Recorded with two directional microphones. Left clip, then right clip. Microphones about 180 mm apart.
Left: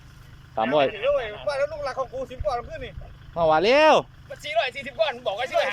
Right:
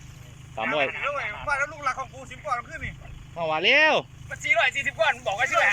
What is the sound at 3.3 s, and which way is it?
Speech, 25° left (ahead or behind).